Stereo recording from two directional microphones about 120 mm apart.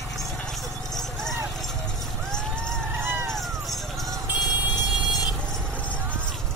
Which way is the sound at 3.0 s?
20° right (ahead or behind).